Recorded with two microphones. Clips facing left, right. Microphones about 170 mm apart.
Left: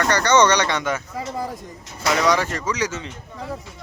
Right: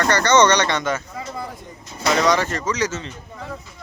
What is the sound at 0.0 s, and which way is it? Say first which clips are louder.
Speech: right 1 dB; 10° left (ahead or behind).